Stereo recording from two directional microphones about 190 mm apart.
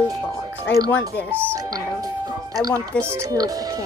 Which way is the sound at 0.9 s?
10° left (ahead or behind).